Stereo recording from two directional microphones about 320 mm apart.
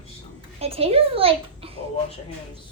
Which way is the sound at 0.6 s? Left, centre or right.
Centre.